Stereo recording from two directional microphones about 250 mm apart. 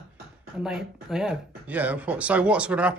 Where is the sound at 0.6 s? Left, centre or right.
Centre.